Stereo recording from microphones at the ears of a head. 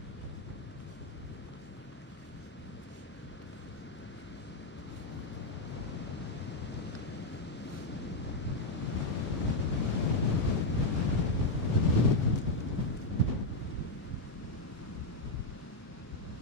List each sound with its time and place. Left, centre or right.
8.8 s waves: left